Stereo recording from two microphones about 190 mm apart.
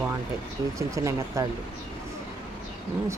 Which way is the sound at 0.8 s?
15° right (ahead or behind).